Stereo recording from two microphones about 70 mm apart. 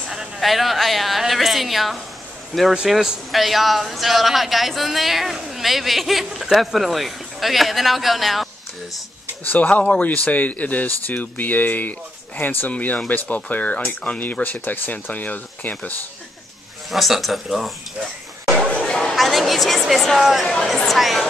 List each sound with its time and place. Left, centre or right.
0.1 s a woman's voice: centre
9.4 s speech: left
16.9 s speech: centre
18.7 s chatter: centre
19.1 s speech: centre